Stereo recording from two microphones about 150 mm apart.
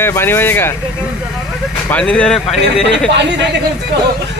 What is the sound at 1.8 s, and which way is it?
Speech, 10° left (ahead or behind).